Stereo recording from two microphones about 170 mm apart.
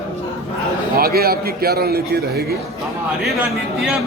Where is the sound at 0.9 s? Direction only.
65° right (ahead or behind).